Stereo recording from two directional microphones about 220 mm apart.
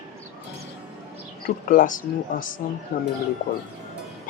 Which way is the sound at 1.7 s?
35° left (ahead or behind).